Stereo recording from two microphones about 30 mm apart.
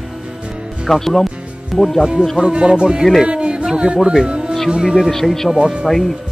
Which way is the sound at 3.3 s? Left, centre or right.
Right.